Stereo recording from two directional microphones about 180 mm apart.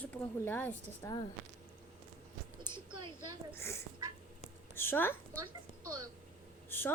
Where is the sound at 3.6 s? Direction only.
15° left (ahead or behind).